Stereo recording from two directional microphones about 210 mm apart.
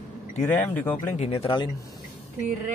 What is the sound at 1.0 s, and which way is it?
Speech, 30° left (ahead or behind).